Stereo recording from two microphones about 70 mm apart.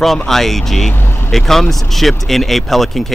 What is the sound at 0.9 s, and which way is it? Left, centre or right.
Vehicle, left.